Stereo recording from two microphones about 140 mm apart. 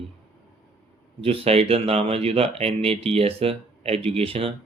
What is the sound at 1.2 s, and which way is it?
Speech, 45° right (ahead or behind).